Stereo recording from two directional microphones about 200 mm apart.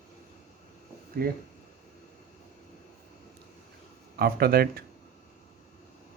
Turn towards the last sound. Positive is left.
turn(degrees=-50)  # may be behind; listen again after turning